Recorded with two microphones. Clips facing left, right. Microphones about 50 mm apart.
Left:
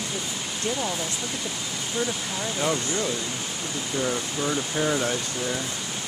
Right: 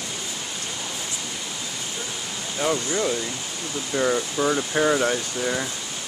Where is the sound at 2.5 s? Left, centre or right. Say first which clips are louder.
Right 3 dB; centre.